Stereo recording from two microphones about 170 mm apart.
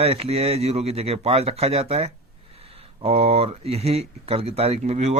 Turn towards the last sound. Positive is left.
turn(degrees=-40)  # may be behind; listen again after turning